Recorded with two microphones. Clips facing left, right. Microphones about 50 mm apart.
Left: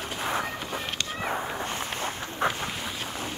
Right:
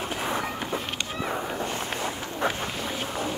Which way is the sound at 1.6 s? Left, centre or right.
Left.